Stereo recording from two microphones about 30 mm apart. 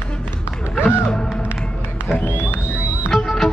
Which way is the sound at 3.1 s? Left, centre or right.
Centre.